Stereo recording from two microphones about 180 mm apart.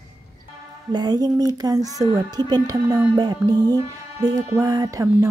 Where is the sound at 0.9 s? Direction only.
20° right (ahead or behind).